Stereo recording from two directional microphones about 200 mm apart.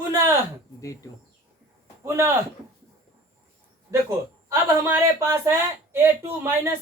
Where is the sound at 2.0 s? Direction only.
15° right (ahead or behind).